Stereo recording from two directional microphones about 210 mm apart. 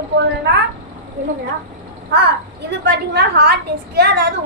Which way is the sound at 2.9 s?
55° right (ahead or behind).